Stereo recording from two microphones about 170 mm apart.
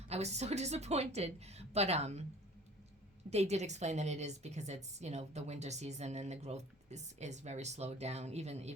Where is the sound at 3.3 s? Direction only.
40° right (ahead or behind).